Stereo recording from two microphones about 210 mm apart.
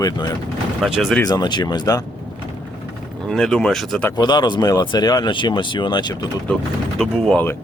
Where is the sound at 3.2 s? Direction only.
Centre (ahead or behind).